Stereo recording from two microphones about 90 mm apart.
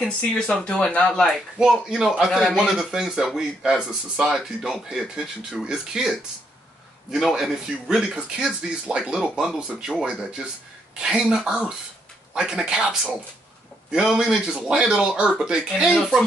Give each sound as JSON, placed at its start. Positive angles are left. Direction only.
{"t": 0.7, "sound": "speech", "side_deg": 10}
{"t": 1.6, "sound": "speech", "side_deg": -10}